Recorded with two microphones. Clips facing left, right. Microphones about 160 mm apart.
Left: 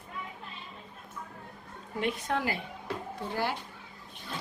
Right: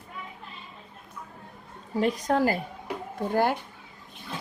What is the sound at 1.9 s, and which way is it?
A woman's voice, 40° right (ahead or behind).